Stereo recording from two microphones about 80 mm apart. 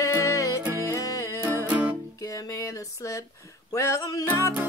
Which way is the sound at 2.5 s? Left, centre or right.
Left.